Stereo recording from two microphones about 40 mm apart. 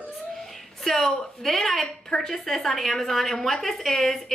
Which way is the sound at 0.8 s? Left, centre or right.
Centre.